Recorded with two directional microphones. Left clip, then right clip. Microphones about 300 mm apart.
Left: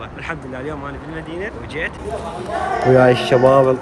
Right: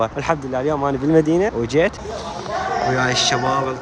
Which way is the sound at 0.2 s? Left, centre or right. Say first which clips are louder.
Right 7 dB; centre.